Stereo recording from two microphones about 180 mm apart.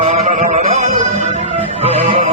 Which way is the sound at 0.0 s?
40° right (ahead or behind).